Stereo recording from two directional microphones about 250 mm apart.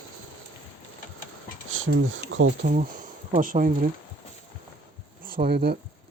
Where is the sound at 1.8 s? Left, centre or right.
Right.